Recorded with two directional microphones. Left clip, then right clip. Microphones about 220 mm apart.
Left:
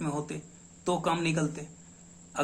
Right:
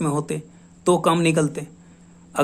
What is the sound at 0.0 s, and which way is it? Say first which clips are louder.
A man's voice: right 10 dB; 50° right (ahead or behind).